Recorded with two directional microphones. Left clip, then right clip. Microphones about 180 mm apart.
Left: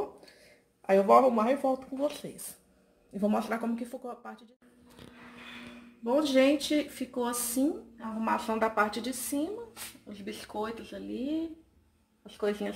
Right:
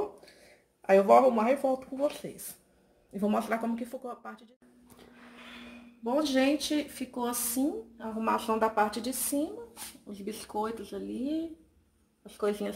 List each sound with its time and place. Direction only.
0.8 s speech: centre (ahead or behind)
6.0 s speech: 15° right (ahead or behind)
8.2 s speech: 5° right (ahead or behind)
12.4 s speech: 5° right (ahead or behind)